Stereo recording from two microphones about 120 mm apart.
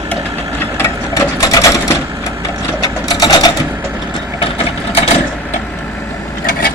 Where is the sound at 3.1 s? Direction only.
30° left (ahead or behind).